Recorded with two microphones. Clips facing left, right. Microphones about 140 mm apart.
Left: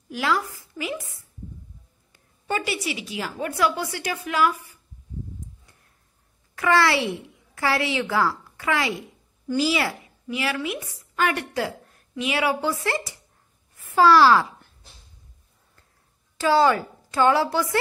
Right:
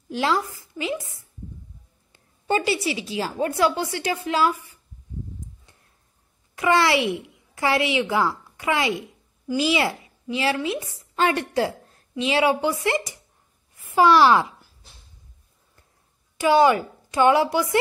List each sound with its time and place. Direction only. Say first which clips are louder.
0.1 s a woman's voice: right 2 dB; 25° right (ahead or behind)
6.5 s a woman's voice: right 1 dB; 20° right (ahead or behind)
16.3 s a woman's voice: right 2 dB; 15° right (ahead or behind)